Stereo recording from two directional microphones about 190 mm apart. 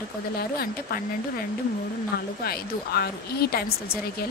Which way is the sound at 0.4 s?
55° left (ahead or behind).